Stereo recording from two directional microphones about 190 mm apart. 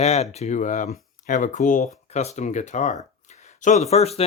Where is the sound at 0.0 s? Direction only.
35° left (ahead or behind).